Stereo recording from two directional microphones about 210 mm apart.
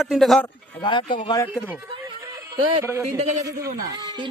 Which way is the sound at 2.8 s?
10° right (ahead or behind).